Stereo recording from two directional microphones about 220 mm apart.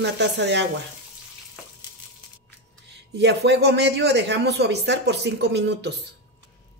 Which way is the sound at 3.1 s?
50° right (ahead or behind).